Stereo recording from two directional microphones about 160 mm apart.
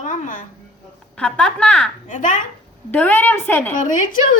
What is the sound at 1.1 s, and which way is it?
Speech, 5° left (ahead or behind).